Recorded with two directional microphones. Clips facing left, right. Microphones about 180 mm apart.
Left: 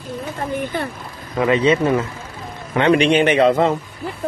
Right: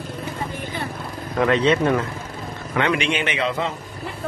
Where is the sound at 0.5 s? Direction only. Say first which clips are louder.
Left 6 dB; 55° left (ahead or behind).